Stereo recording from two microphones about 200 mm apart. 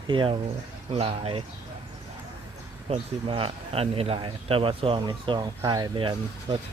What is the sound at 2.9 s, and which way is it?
Speech, 25° right (ahead or behind).